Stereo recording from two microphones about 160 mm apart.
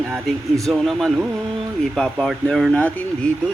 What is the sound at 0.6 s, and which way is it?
Speech, centre (ahead or behind).